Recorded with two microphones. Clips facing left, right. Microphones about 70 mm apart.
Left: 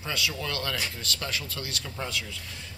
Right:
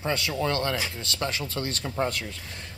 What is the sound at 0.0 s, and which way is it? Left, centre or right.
Speech, right.